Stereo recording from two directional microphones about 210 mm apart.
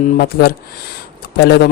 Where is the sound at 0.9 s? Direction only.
50° left (ahead or behind).